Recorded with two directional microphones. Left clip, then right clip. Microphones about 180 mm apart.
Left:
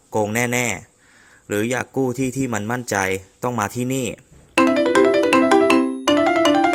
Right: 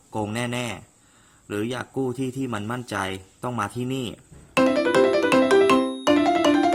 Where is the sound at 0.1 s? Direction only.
25° left (ahead or behind).